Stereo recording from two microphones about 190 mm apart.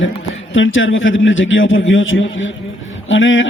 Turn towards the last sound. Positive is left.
turn(degrees=90)